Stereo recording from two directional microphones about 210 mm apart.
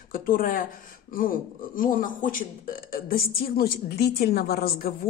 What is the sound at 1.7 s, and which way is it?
Speech, 40° left (ahead or behind).